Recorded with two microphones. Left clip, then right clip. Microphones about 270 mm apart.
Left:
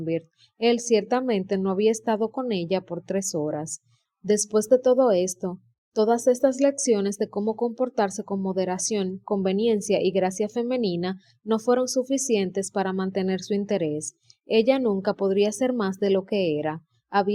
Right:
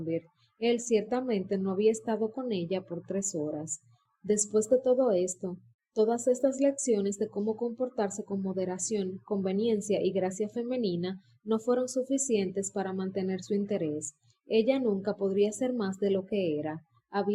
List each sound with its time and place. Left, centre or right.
0.0 s a woman's voice: left